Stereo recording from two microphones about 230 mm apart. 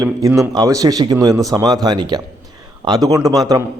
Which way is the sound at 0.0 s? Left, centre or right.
Centre.